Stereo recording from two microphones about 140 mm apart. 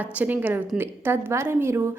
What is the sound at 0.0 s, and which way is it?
A woman's voice, 10° right (ahead or behind).